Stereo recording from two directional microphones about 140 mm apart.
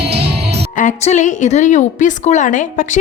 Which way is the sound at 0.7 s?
60° left (ahead or behind).